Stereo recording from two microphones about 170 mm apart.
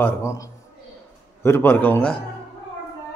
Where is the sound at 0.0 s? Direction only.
15° left (ahead or behind).